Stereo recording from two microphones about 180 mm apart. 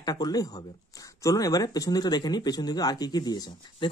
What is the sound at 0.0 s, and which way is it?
Speech, 20° left (ahead or behind).